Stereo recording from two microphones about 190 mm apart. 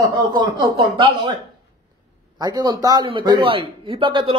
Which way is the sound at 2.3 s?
20° right (ahead or behind).